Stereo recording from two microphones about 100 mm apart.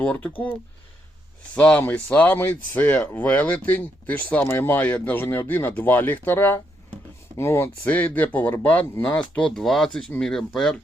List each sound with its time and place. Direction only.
0.0 s speech: 15° left (ahead or behind)
1.5 s speech: 15° left (ahead or behind)
9.6 s speech: centre (ahead or behind)